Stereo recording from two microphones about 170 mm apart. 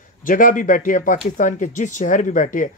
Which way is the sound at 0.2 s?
50° left (ahead or behind).